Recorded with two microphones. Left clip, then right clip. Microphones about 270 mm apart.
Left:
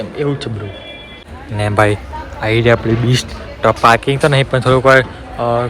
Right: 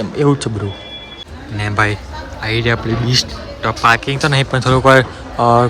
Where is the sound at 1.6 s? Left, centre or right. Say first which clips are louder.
Left 3 dB; centre.